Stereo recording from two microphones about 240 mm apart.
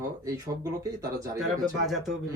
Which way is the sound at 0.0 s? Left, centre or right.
Centre.